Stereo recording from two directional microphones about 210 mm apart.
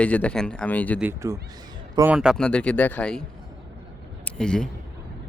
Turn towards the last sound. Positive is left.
turn(degrees=5)  # may be behind; listen again after turning